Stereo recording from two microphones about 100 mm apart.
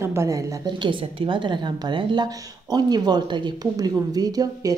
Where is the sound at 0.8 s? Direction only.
60° right (ahead or behind); by 4.7 s 40° right (ahead or behind).